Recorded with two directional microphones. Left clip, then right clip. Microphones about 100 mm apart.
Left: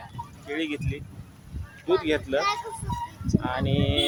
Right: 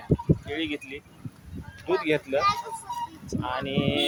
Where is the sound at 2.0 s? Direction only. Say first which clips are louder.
Even; 25° left (ahead or behind).